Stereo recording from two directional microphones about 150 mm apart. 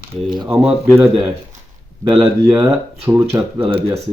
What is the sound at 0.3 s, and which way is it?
Speech, 30° right (ahead or behind).